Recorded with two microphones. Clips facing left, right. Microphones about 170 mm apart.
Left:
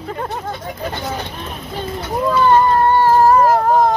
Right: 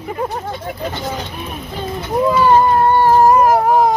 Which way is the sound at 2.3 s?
10° right (ahead or behind).